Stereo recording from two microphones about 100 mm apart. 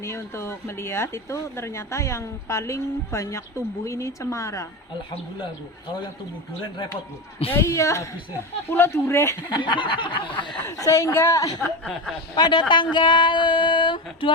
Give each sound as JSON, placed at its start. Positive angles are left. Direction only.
{"t": 0.0, "sound": "speech", "side_deg": 25}
{"t": 7.5, "sound": "speech", "side_deg": 30}
{"t": 9.6, "sound": "a sound", "side_deg": 55}
{"t": 10.7, "sound": "speech", "side_deg": 30}
{"t": 12.3, "sound": "speech", "side_deg": 45}